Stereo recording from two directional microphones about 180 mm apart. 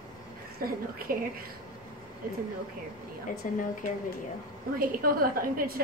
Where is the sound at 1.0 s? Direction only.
55° right (ahead or behind).